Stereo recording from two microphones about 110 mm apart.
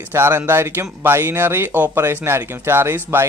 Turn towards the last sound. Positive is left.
turn(degrees=-20)  # may be behind; listen again after turning